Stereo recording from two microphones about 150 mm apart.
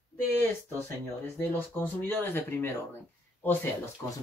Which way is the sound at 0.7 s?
15° left (ahead or behind).